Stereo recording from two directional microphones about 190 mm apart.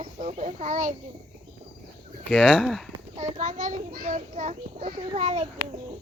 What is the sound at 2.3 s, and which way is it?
Speech, 5° right (ahead or behind).